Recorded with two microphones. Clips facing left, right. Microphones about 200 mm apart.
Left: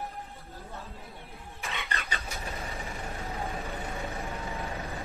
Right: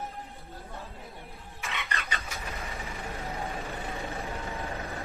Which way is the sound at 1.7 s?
30° left (ahead or behind).